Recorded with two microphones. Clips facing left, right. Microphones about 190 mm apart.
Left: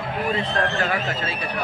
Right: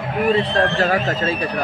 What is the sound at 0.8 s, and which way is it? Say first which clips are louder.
Speech: right 6 dB; 40° right (ahead or behind).